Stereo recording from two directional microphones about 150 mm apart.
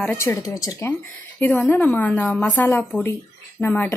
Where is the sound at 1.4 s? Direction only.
10° left (ahead or behind).